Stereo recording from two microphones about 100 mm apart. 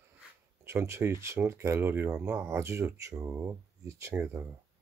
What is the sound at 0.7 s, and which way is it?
Speech, 25° right (ahead or behind).